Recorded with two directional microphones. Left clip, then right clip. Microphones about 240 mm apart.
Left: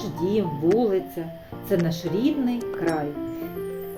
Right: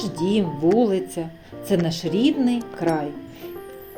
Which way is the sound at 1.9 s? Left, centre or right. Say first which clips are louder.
Right 3 dB; right.